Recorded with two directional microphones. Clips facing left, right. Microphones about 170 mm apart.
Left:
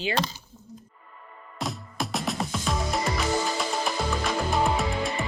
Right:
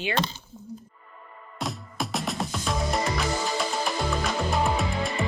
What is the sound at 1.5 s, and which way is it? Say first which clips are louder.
Music: even; centre (ahead or behind).